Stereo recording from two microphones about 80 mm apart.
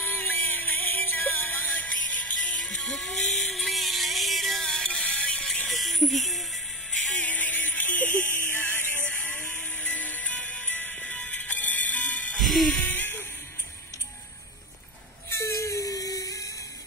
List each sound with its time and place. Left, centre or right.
0.0 s music: left
2.6 s music: centre
7.2 s music: left
9.2 s music: centre
12.4 s music: centre
12.8 s music: left
15.2 s a sound: left